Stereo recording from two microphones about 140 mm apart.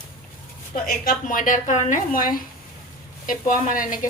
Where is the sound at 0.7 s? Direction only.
80° left.